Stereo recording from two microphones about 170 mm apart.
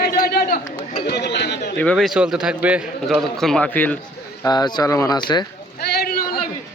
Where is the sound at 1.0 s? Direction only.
80° left.